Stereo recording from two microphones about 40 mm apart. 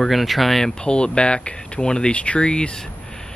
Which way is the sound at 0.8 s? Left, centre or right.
Left.